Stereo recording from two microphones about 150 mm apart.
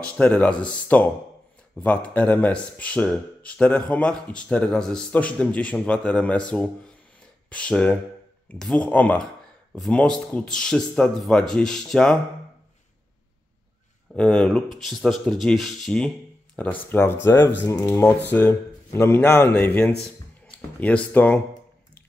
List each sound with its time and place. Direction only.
0.0 s speech: 10° left (ahead or behind)
14.1 s speech: 5° left (ahead or behind)